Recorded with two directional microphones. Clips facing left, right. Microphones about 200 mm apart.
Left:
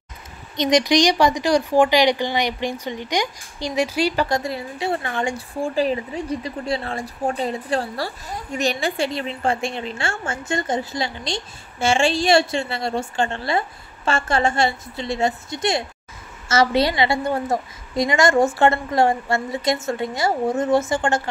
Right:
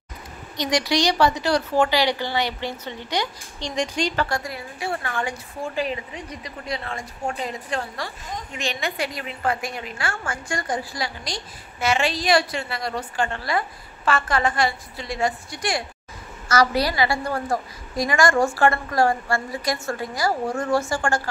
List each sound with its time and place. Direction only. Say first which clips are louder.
0.6 s speech: left 5 dB; 20° left (ahead or behind)
4.4 s a woman's voice: left 5 dB; 25° left (ahead or behind)